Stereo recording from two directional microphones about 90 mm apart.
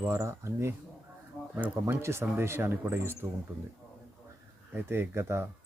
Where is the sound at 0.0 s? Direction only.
30° right (ahead or behind).